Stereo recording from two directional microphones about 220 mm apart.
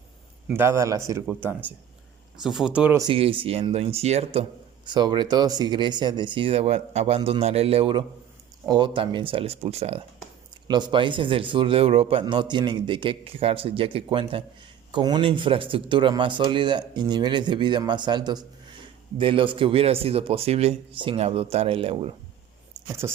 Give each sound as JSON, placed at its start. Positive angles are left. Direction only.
{"t": 0.4, "sound": "a man's voice", "side_deg": -10}
{"t": 3.0, "sound": "a man's voice", "side_deg": -25}
{"t": 23.0, "sound": "a man's voice", "side_deg": -15}